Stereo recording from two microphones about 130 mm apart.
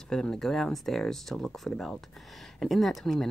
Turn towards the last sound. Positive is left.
turn(degrees=5)  # may be behind; listen again after turning